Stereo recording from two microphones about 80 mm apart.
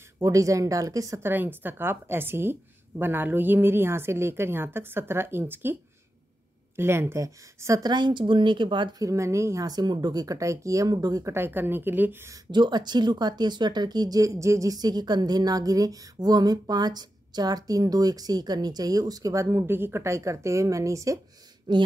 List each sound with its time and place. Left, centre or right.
0.2 s speech: right
1.2 s a woman's voice: right
6.8 s speech: right
7.8 s a woman's voice: right
8.9 s speech: right
9.7 s speech: right
11.2 s a woman's voice: right
12.4 s speech: right
21.7 s speech: right